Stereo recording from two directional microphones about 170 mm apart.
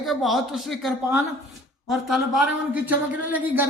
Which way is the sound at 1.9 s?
Centre (ahead or behind).